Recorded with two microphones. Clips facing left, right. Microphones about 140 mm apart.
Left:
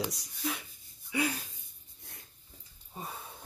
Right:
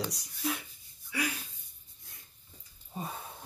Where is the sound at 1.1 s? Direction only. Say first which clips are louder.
Left 3 dB; 30° left (ahead or behind).